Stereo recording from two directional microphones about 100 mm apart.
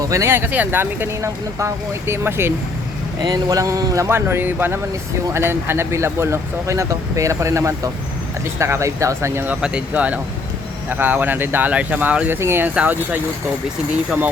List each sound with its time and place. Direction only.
0.0 s speech: 30° right (ahead or behind)
3.2 s speech: 40° right (ahead or behind); by 9.6 s 25° right (ahead or behind)
9.6 s speech: 10° right (ahead or behind)